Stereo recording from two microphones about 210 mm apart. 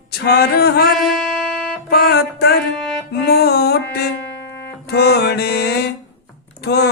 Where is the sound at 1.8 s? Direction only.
50° left (ahead or behind).